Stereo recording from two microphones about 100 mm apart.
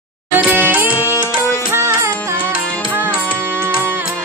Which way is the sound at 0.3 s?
20° right (ahead or behind).